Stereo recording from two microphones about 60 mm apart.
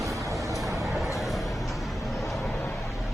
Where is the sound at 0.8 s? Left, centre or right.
Centre.